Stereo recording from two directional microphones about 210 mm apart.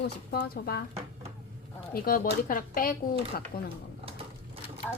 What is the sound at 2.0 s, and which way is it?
A woman's voice, 45° left (ahead or behind).